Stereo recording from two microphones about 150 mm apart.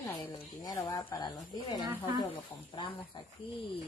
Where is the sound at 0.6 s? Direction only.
25° left (ahead or behind).